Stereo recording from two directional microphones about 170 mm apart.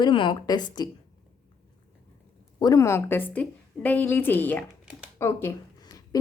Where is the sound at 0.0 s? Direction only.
30° left (ahead or behind).